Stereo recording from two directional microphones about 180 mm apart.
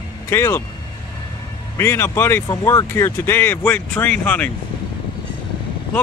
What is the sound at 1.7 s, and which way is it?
Speech, 15° left (ahead or behind).